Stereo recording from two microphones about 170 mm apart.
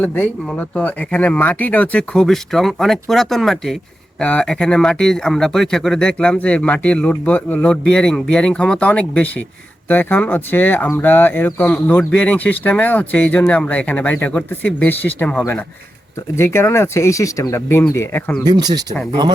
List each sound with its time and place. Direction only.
0.0 s speech: 10° left (ahead or behind)
18.4 s speech: 25° right (ahead or behind)